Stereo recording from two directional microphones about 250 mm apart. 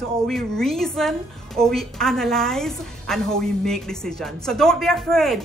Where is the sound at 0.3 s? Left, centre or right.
Centre.